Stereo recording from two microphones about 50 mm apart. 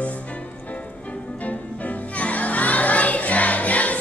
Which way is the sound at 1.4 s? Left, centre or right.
Left.